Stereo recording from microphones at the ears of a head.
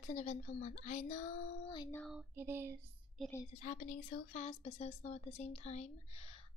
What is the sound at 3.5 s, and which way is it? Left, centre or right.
A woman's voice, left.